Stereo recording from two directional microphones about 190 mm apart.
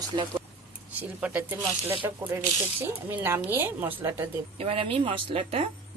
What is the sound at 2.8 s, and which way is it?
Speech, 10° right (ahead or behind).